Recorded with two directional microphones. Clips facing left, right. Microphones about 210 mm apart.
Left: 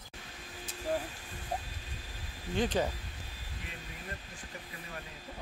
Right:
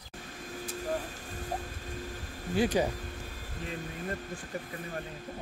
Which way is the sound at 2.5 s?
10° right (ahead or behind).